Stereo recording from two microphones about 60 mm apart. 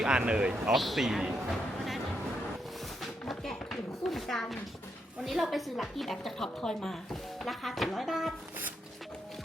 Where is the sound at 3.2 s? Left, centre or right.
Centre.